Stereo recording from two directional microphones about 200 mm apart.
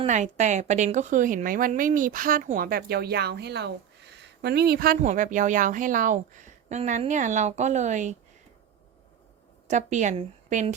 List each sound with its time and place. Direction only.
0.0 s a woman's voice: 35° right (ahead or behind)
9.6 s a woman's voice: 35° right (ahead or behind)